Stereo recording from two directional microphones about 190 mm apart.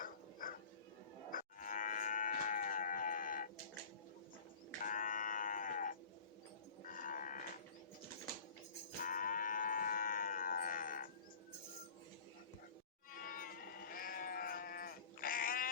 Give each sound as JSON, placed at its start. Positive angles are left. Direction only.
{"t": 0.0, "sound": "dog", "side_deg": 45}
{"t": 1.3, "sound": "livestock", "side_deg": 45}
{"t": 4.8, "sound": "livestock", "side_deg": 45}
{"t": 6.8, "sound": "cattle", "side_deg": 45}
{"t": 9.0, "sound": "livestock", "side_deg": 45}
{"t": 13.1, "sound": "goat", "side_deg": 50}